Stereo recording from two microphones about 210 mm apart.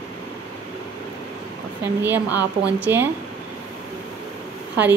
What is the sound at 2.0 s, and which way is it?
A woman's voice, 10° right (ahead or behind).